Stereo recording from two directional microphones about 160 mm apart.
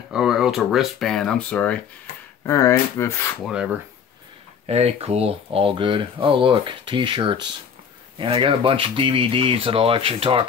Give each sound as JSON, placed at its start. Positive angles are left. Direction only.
{"t": 0.1, "sound": "speech", "side_deg": -5}
{"t": 2.4, "sound": "speech", "side_deg": 20}
{"t": 4.6, "sound": "speech", "side_deg": -40}